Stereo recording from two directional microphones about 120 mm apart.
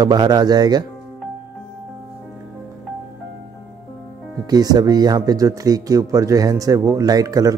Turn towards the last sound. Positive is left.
turn(degrees=-30)  # may be behind; listen again after turning